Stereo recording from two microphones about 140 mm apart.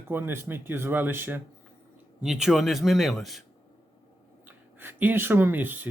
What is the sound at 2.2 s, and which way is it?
Speech, 5° right (ahead or behind).